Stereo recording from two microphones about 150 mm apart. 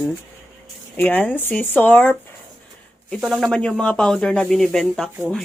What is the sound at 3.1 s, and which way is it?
Speech, centre (ahead or behind).